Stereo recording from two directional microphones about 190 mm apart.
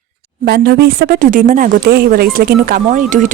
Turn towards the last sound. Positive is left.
turn(degrees=-45)  # may be behind; listen again after turning